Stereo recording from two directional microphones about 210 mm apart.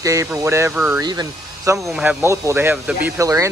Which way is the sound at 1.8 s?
5° right (ahead or behind).